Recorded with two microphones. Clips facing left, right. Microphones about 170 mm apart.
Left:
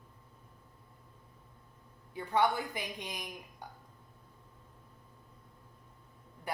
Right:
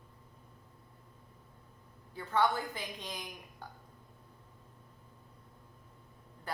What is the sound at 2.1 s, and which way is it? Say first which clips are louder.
A woman's voice: left 1 dB; 15° left (ahead or behind).